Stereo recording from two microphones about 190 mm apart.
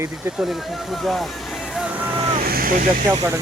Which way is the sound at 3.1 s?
20° right (ahead or behind).